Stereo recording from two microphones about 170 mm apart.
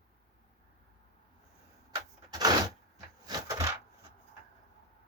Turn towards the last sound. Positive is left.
turn(degrees=-20)  # may be behind; listen again after turning